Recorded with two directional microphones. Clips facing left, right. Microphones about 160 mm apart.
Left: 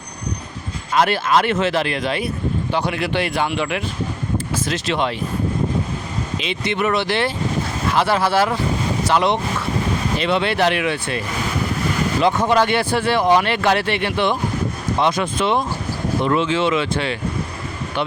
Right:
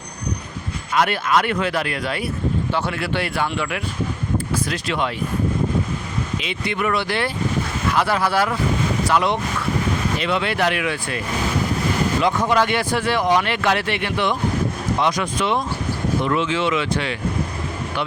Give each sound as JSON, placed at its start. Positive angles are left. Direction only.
{"t": 0.9, "sound": "speech", "side_deg": 30}
{"t": 6.4, "sound": "speech", "side_deg": 25}
{"t": 12.2, "sound": "speech", "side_deg": 30}